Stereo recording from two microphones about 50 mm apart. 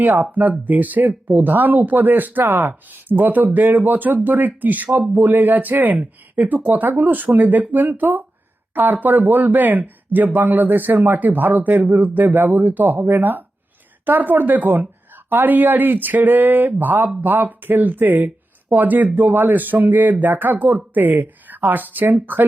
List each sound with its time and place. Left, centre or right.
0.0 s speech: right